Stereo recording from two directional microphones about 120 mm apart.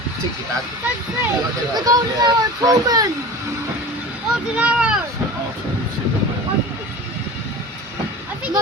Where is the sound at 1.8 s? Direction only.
35° right (ahead or behind).